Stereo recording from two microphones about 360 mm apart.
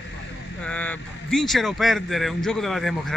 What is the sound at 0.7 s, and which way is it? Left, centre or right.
Speech, centre.